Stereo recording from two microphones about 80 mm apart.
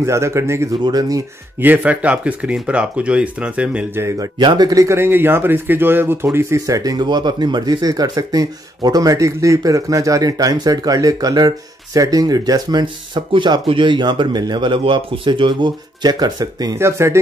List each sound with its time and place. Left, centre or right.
0.0 s speech: right
0.8 s speech: right
1.6 s speech: right
4.4 s speech: right
4.7 s speech: right
6.6 s speech: right
16.7 s speech: right